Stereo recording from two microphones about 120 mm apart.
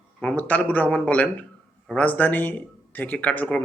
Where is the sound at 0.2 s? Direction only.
10° left (ahead or behind).